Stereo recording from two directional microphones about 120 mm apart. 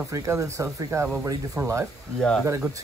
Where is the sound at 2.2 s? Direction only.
5° left (ahead or behind).